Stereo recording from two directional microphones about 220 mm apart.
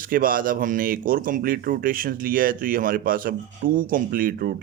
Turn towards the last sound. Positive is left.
turn(degrees=-40)  # may be behind; listen again after turning